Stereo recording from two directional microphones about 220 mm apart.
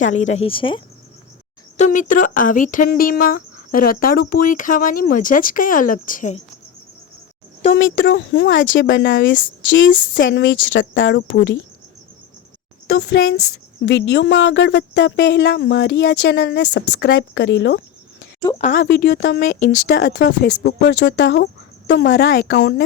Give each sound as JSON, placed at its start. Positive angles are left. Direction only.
{"t": 0.0, "sound": "speech", "side_deg": 30}
{"t": 1.7, "sound": "speech", "side_deg": 35}
{"t": 7.7, "sound": "a woman's voice", "side_deg": 60}
{"t": 13.0, "sound": "a woman's voice", "side_deg": 55}
{"t": 18.6, "sound": "speech", "side_deg": 40}